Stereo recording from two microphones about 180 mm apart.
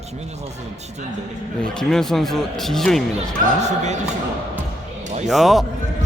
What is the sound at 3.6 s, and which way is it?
Speech, 40° right (ahead or behind).